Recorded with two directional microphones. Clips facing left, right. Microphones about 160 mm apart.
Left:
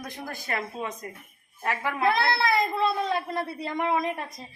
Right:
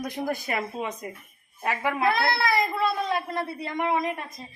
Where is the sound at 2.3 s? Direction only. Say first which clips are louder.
Even; 25° left (ahead or behind).